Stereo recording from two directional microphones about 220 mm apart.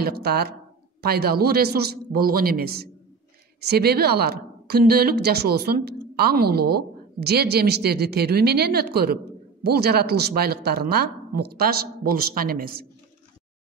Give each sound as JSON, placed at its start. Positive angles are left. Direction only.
{"t": 0.0, "sound": "speech", "side_deg": -45}